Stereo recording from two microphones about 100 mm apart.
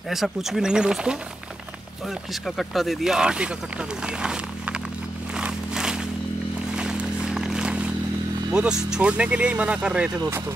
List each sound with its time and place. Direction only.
0.1 s speech: centre (ahead or behind)
2.4 s speech: centre (ahead or behind)
4.0 s a sound: 10° right (ahead or behind)
8.5 s speech: 10° right (ahead or behind)